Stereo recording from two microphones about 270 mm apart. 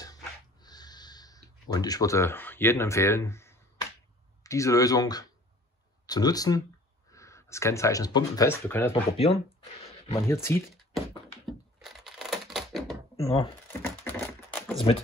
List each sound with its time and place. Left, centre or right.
0.0 s a sound: centre
4.4 s speech: centre
9.1 s speech: left
10.2 s speech: centre
11.0 s a sound: centre
13.1 s speech: centre
14.0 s typing: centre